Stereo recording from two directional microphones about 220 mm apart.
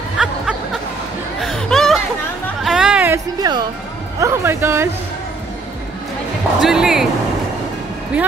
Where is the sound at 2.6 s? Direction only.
Centre (ahead or behind).